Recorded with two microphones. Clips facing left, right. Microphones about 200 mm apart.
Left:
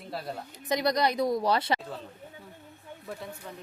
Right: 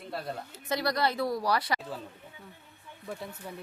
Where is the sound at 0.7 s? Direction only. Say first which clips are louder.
Left 3 dB; 20° left (ahead or behind).